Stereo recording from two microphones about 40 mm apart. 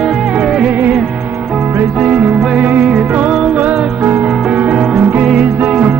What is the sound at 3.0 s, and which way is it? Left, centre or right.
Music, right.